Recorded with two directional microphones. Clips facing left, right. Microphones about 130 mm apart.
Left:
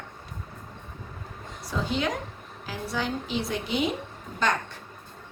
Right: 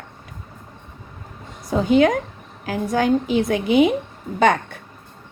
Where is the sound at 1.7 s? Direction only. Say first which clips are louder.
Right 12 dB; 55° right (ahead or behind).